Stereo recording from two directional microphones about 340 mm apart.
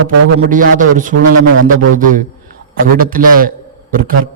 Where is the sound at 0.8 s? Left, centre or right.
Right.